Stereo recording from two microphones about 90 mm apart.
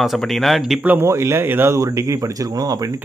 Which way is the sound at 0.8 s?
20° right (ahead or behind).